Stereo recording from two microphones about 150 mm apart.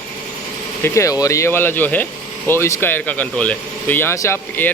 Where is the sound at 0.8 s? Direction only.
20° left (ahead or behind).